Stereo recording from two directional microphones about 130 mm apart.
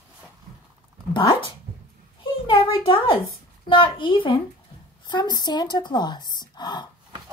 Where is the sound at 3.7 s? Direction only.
40° left (ahead or behind).